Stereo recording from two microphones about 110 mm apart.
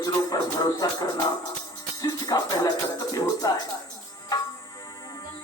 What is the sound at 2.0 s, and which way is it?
Music, 35° left (ahead or behind).